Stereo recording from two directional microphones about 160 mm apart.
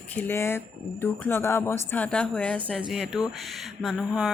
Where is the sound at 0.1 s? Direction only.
10° left (ahead or behind).